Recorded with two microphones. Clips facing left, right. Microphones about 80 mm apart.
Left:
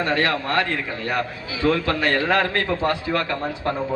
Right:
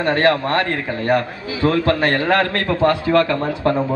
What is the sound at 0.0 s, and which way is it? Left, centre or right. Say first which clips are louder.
A woman's voice: right 6 dB; right.